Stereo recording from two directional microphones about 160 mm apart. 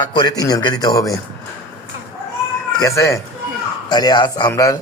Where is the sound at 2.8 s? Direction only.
20° left (ahead or behind).